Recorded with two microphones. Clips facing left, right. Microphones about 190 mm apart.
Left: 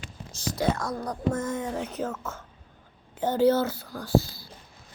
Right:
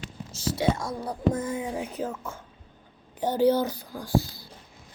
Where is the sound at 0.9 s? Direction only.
10° right (ahead or behind).